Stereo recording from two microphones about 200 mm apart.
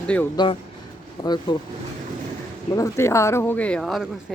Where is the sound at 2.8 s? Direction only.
15° left (ahead or behind).